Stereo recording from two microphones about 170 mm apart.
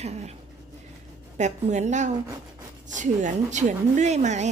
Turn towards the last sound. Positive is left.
turn(degrees=-45)  # may be behind; listen again after turning